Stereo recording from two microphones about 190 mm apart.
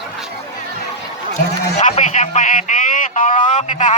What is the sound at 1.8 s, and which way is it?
A man's voice, 40° left (ahead or behind).